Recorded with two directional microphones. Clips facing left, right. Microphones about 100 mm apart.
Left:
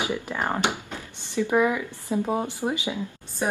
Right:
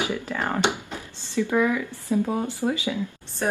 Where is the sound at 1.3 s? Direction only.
15° left (ahead or behind).